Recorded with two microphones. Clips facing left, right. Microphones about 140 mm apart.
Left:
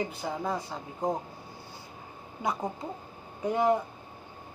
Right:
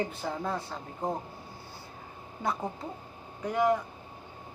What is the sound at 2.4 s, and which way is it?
Speech, 15° left (ahead or behind).